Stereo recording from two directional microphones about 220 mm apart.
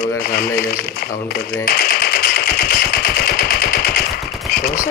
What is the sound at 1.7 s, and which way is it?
Machine gun, 45° left (ahead or behind).